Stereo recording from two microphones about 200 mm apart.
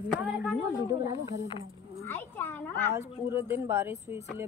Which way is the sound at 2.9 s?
10° right (ahead or behind).